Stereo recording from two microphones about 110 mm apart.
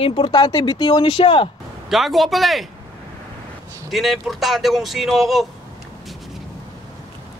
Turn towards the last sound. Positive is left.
turn(degrees=0)  # may be behind; listen again after turning